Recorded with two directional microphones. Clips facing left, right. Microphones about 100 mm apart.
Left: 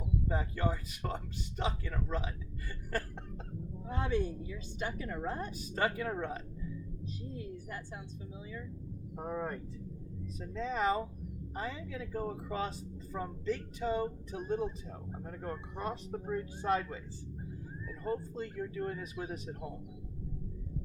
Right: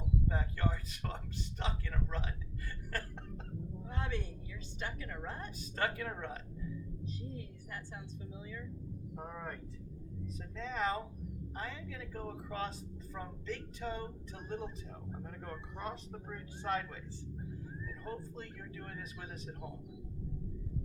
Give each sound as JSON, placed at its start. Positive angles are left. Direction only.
{"t": 0.3, "sound": "a woman's voice", "side_deg": 10}
{"t": 9.1, "sound": "a woman's voice", "side_deg": 20}
{"t": 15.8, "sound": "a woman's voice", "side_deg": 15}